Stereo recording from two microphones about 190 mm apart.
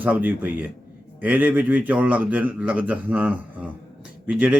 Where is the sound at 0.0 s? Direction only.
10° right (ahead or behind).